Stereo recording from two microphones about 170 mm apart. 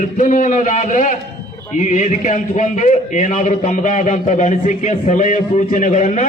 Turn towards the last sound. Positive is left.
turn(degrees=45)  # may be behind; listen again after turning